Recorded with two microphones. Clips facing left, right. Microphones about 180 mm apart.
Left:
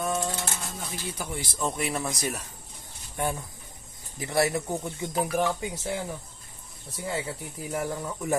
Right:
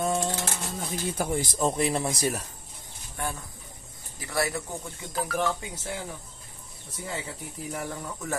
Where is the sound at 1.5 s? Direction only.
35° right (ahead or behind).